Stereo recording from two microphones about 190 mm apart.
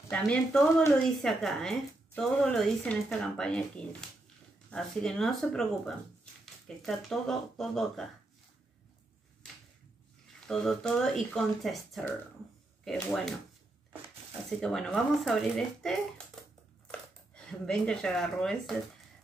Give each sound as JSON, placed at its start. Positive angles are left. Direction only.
{"t": 0.1, "sound": "speech", "side_deg": 5}
{"t": 10.4, "sound": "speech", "side_deg": 5}
{"t": 14.6, "sound": "speech", "side_deg": 5}
{"t": 17.4, "sound": "speech", "side_deg": 5}